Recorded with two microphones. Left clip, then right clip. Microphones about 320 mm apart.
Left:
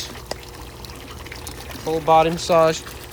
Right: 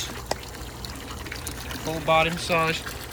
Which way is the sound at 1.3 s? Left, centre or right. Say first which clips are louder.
Even; centre.